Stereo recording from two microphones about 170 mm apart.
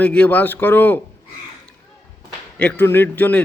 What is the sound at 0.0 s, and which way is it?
A man's voice, 10° left (ahead or behind).